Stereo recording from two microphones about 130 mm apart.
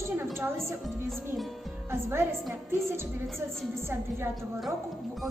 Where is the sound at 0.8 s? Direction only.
Centre (ahead or behind).